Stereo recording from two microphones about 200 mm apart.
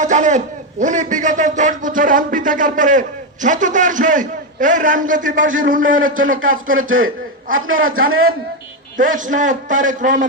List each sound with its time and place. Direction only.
0.0 s a man's voice: 35° right (ahead or behind)
7.9 s a man's voice: 90° right
9.0 s a man's voice: 40° right (ahead or behind)